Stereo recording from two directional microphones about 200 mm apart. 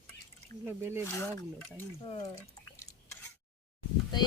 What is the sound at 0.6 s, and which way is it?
Speech, 10° right (ahead or behind).